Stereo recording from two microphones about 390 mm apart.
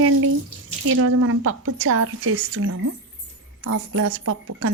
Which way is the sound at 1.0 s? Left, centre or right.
Right.